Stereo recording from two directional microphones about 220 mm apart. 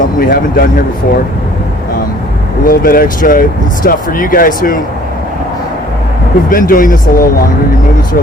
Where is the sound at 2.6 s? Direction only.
40° left (ahead or behind).